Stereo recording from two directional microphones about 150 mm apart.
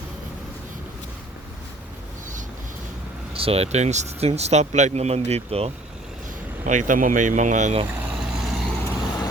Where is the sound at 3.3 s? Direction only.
40° right (ahead or behind).